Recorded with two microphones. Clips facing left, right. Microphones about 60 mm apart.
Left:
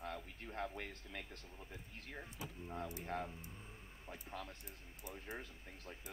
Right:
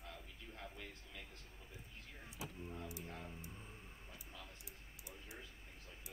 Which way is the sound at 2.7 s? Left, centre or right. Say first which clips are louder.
Left 6 dB; left.